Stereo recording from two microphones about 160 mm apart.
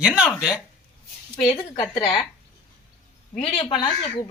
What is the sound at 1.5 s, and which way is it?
Speech, 30° left (ahead or behind).